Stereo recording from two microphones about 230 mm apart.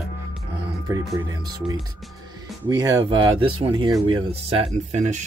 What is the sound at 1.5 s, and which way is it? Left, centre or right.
Speech, centre.